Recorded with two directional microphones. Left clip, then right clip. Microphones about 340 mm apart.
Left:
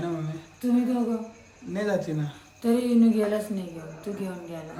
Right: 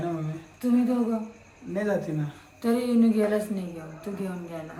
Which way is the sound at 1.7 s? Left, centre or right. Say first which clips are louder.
Even; centre.